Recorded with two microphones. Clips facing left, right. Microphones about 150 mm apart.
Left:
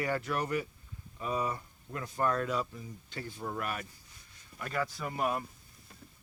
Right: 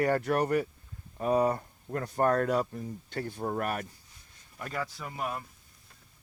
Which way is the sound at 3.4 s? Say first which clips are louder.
Right 4 dB; 50° right (ahead or behind).